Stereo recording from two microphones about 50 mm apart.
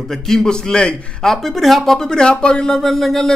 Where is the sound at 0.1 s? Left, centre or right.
Centre.